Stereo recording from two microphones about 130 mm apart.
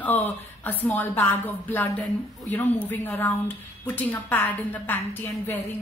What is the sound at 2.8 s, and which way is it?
A woman's voice, 15° left (ahead or behind).